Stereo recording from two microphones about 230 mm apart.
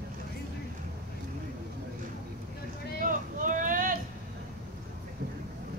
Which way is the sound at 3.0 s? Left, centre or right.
Right.